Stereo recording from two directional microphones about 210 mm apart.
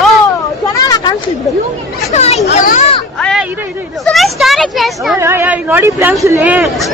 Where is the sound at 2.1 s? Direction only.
30° left (ahead or behind).